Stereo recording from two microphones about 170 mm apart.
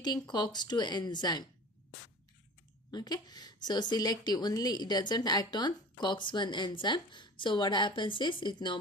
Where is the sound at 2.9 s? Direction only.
25° left (ahead or behind).